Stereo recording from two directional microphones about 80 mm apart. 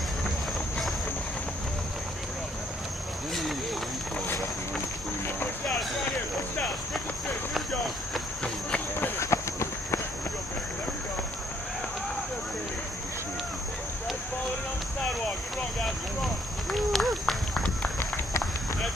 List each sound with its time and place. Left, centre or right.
5.7 s a sound: centre
9.2 s clip-clop: left
16.7 s run: centre
17.9 s run: left